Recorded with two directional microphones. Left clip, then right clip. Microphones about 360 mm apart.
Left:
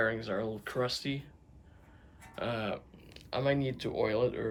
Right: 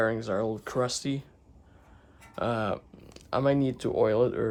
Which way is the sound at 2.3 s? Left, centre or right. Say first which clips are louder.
Right 6 dB; centre.